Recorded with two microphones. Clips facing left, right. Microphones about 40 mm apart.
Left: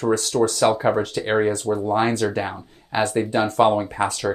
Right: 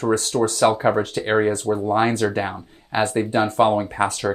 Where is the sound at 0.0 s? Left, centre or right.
Right.